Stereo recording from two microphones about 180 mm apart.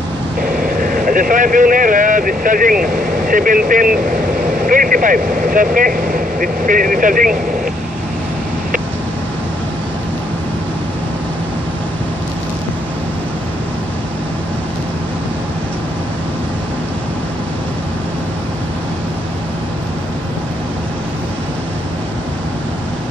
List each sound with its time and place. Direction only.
0.7 s speech: 50° right (ahead or behind)